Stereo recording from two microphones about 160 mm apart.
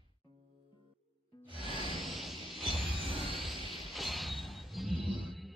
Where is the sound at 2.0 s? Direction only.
Centre (ahead or behind).